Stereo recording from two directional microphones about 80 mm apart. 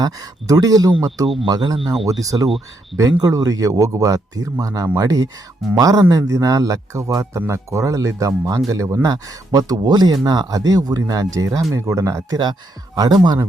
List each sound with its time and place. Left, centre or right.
0.0 s speech: right
1.5 s speech: right
2.2 s speech: right
12.3 s speech: right